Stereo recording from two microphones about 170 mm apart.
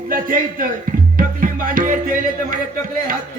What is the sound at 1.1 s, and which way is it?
Music, 55° right (ahead or behind).